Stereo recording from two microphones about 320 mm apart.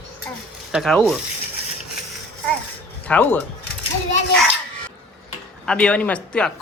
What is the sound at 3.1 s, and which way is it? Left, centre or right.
Speech, centre.